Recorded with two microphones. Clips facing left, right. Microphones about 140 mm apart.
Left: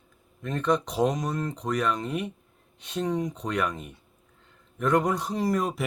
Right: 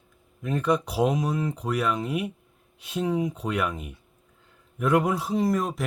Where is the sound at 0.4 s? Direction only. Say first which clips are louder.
Right 1 dB; 5° right (ahead or behind).